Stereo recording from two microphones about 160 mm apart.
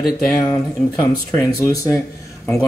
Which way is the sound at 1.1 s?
20° left (ahead or behind).